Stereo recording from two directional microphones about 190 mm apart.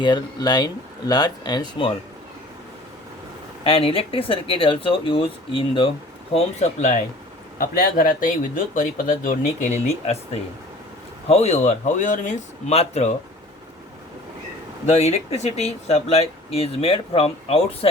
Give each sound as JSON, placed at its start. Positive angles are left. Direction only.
{"t": 0.0, "sound": "speech", "side_deg": 25}
{"t": 3.6, "sound": "speech", "side_deg": 30}
{"t": 7.6, "sound": "speech", "side_deg": 50}
{"t": 14.8, "sound": "speech", "side_deg": 35}